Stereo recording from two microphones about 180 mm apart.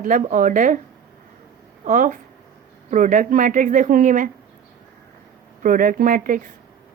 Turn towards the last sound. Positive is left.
turn(degrees=-50)  # may be behind; listen again after turning